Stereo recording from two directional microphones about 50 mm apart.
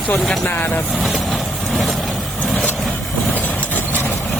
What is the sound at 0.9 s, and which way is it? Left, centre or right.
Speech, centre.